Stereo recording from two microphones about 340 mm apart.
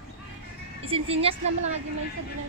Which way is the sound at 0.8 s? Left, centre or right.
Centre.